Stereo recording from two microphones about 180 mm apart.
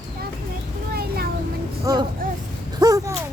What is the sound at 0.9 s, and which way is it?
Vehicle, 60° right (ahead or behind).